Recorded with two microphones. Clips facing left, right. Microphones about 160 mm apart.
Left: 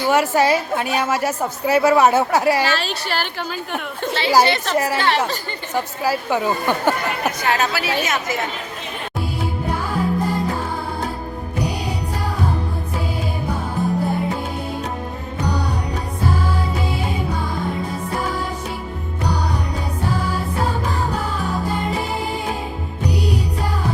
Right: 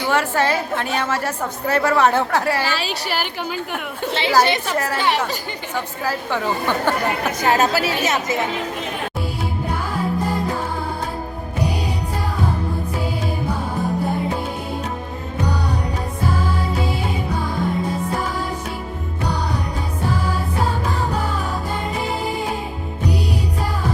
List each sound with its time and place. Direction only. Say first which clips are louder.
0.1 s a woman's voice: left 3 dB; 10° left (ahead or behind)
2.7 s a woman's voice: left 1 dB; 10° right (ahead or behind)
5.7 s a woman's voice: left 4 dB; 10° left (ahead or behind)
7.3 s a woman's voice: right 3 dB; 45° right (ahead or behind)